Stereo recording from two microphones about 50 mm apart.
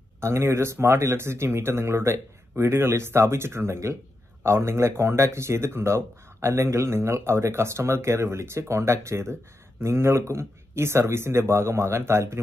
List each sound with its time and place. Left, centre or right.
0.2 s speech: right